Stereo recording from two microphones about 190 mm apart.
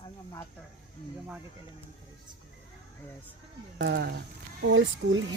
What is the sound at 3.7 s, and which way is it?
Speech, 70° right (ahead or behind).